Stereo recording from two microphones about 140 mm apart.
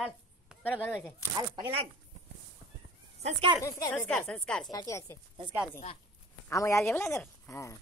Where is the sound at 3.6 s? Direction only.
20° left (ahead or behind).